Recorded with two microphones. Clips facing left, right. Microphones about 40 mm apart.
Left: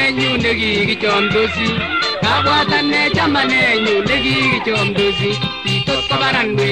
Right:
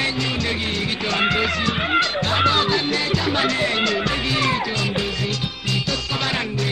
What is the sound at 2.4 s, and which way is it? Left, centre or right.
Music, left.